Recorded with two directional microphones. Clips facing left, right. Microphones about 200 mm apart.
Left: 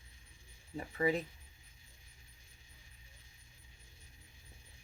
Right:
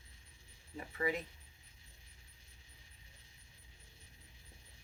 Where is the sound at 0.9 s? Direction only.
30° left (ahead or behind).